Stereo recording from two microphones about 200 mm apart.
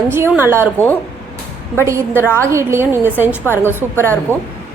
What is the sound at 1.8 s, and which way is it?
A woman's voice, 15° right (ahead or behind).